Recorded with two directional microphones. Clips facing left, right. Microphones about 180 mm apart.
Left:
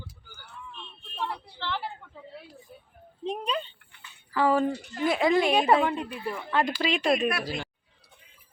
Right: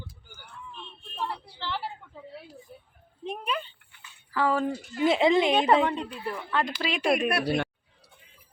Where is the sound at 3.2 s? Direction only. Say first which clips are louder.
Left 2 dB; 20° left (ahead or behind).